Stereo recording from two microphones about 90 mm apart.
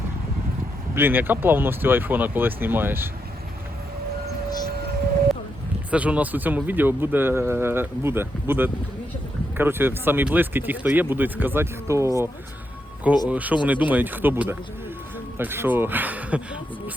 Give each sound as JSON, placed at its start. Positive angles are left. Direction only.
{"t": 0.9, "sound": "speech", "side_deg": -25}
{"t": 5.9, "sound": "speech", "side_deg": -15}
{"t": 13.2, "sound": "speech", "side_deg": -15}